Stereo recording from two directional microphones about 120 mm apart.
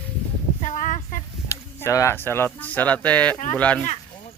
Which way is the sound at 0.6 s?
90° left.